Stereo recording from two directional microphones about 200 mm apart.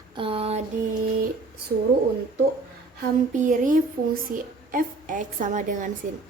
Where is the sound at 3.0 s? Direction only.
40° right (ahead or behind).